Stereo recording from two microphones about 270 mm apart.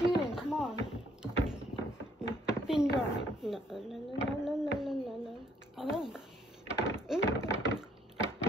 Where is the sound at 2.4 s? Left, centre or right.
Centre.